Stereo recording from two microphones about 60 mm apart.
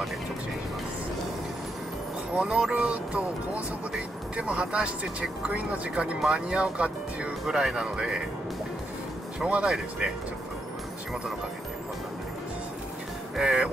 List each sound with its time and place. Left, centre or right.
2.3 s speech: centre
9.4 s speech: centre
13.4 s speech: centre